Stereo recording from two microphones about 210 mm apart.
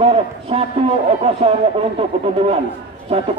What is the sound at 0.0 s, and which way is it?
A man's voice, 25° right (ahead or behind).